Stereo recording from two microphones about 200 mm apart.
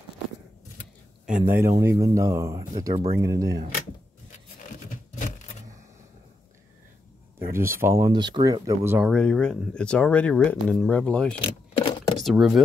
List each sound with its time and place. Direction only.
1.2 s speech: 10° right (ahead or behind)
7.3 s speech: 10° right (ahead or behind)
9.1 s speech: 5° left (ahead or behind)
11.8 s a sound: 25° left (ahead or behind)
12.2 s speech: centre (ahead or behind)